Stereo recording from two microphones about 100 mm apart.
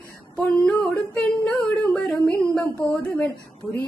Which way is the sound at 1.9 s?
5° left (ahead or behind).